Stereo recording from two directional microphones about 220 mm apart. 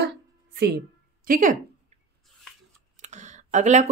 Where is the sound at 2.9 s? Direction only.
30° right (ahead or behind).